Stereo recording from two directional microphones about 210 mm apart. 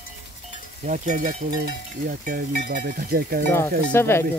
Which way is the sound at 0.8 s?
35° right (ahead or behind).